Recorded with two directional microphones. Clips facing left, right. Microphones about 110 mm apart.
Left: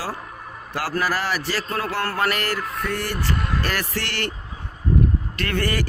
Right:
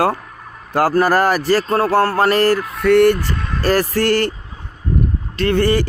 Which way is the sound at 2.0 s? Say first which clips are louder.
Right 9 dB; 30° right (ahead or behind).